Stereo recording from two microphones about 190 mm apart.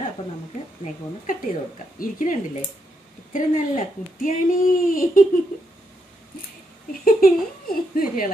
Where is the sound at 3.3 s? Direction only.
45° left (ahead or behind).